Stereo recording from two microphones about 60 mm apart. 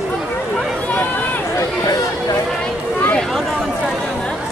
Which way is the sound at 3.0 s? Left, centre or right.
Left.